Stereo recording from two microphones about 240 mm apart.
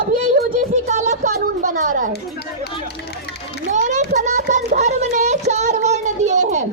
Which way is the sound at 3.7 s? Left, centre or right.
Right.